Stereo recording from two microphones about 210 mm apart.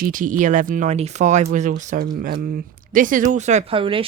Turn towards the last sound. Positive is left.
turn(degrees=-25)  # may be behind; listen again after turning